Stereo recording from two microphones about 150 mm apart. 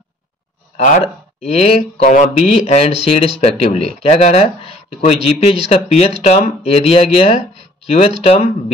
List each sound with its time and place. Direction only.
0.7 s speech: 50° left (ahead or behind)